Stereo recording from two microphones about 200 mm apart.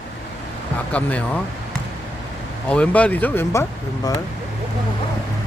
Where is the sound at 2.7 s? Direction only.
5° left (ahead or behind).